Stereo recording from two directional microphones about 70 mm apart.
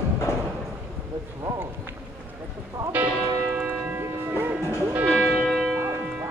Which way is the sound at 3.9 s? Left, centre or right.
Right.